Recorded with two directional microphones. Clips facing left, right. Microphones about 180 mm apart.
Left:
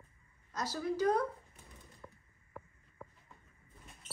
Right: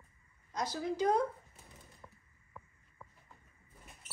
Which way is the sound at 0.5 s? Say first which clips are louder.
Even; 15° right (ahead or behind).